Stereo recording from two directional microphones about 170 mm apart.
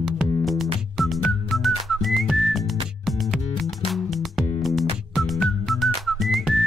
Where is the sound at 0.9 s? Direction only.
Centre (ahead or behind).